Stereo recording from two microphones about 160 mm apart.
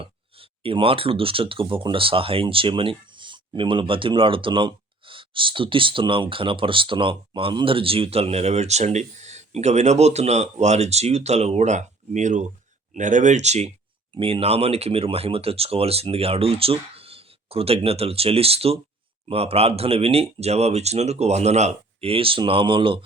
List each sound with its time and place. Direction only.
0.0 s speech: 35° right (ahead or behind)